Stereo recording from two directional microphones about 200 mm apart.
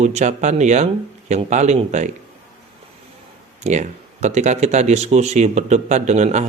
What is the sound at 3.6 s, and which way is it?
A man's voice, 35° right (ahead or behind).